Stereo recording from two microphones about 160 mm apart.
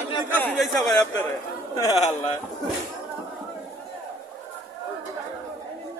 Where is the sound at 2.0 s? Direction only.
45° left (ahead or behind).